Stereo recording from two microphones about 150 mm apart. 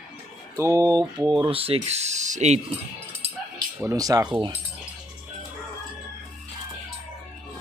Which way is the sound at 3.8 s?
20° right (ahead or behind).